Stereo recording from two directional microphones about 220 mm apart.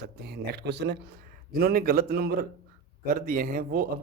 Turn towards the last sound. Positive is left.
turn(degrees=-40)  # may be behind; listen again after turning